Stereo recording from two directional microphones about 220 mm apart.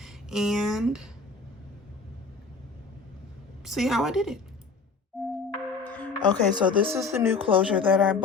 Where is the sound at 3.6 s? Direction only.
Centre (ahead or behind).